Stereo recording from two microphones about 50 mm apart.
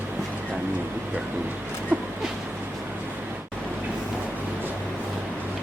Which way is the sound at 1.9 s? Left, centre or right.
Right.